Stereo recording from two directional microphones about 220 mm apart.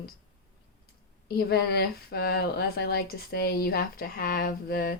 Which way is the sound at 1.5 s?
45° left (ahead or behind).